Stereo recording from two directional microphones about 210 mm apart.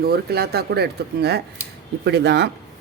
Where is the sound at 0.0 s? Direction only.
50° right (ahead or behind).